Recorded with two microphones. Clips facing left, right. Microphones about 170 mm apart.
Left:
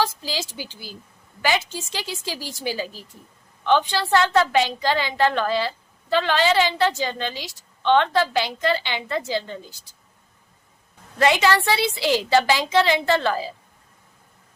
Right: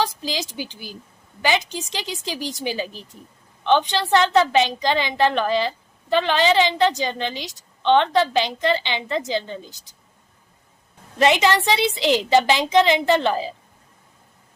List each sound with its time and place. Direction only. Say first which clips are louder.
0.0 s a woman's voice: right 1 dB; 15° right (ahead or behind)
11.2 s a woman's voice: right 1 dB; 20° right (ahead or behind)